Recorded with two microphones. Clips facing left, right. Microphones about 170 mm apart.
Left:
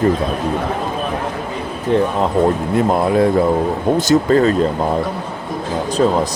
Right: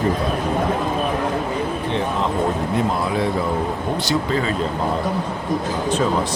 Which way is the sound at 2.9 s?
50° left (ahead or behind).